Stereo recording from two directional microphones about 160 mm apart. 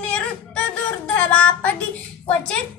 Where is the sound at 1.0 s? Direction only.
10° left (ahead or behind).